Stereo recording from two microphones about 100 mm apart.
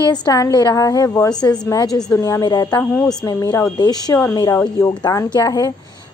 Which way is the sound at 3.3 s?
35° left (ahead or behind).